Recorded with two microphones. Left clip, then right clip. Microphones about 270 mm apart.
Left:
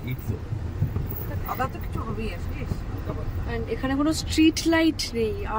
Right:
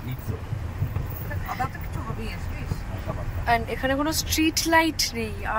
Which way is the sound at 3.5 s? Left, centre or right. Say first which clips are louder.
Right 6 dB; centre.